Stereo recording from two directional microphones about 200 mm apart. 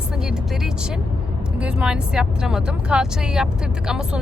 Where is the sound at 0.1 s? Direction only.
5° right (ahead or behind).